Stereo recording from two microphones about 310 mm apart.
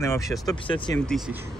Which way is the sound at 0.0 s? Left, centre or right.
Centre.